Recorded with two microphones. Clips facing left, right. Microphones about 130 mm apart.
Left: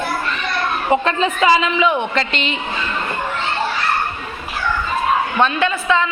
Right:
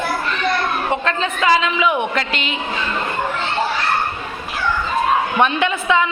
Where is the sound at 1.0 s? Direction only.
10° left (ahead or behind).